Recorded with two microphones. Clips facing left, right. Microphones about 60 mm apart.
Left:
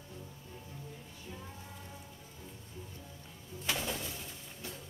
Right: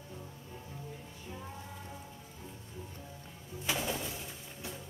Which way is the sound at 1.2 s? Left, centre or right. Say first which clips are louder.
Right 3 dB; centre.